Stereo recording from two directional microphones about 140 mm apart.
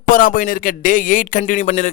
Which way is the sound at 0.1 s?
80° left.